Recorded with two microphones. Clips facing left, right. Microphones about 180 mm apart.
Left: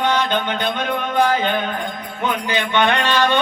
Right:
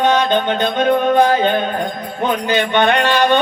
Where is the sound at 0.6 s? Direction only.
45° right (ahead or behind).